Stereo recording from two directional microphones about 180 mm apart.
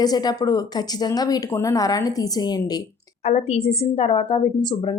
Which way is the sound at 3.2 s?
35° left (ahead or behind).